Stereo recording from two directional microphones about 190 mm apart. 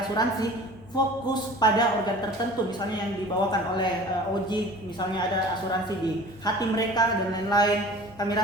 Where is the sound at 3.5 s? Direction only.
20° left (ahead or behind).